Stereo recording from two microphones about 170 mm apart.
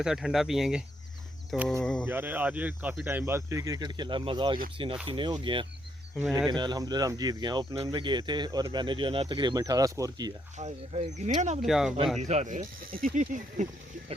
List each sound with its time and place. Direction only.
0.0 s speech: centre (ahead or behind)
2.0 s speech: 10° right (ahead or behind)
10.6 s speech: 40° right (ahead or behind)
11.6 s speech: centre (ahead or behind)
12.3 s speech: 45° right (ahead or behind)